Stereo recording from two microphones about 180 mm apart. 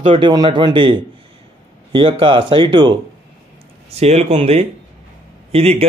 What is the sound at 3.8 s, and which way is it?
Speech, 35° right (ahead or behind).